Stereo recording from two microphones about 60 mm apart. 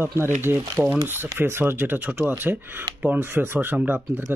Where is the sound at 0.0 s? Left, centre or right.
Right.